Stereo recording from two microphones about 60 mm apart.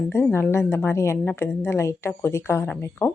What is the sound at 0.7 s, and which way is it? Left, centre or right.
Speech, left.